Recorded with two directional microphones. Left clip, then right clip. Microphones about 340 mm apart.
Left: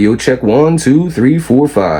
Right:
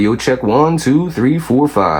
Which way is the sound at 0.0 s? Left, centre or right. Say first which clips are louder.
Left 3 dB; centre.